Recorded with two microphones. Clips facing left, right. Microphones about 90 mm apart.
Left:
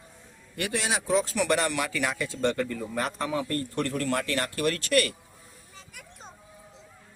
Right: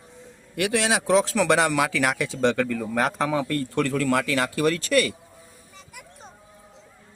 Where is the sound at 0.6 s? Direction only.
90° right.